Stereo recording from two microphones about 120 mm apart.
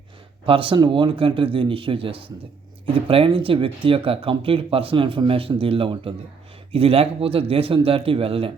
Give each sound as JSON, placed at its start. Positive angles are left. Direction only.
{"t": 0.4, "sound": "speech", "side_deg": -45}